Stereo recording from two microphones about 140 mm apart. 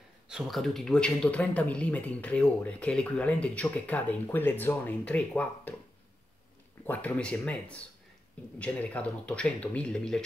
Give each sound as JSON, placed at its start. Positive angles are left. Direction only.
{"t": 0.3, "sound": "speech", "side_deg": 0}
{"t": 6.8, "sound": "speech", "side_deg": 10}